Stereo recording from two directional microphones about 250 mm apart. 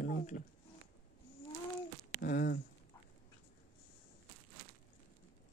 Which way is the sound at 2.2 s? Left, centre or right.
Left.